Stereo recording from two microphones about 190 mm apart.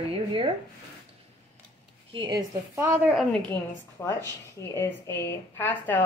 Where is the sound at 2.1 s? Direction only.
20° right (ahead or behind).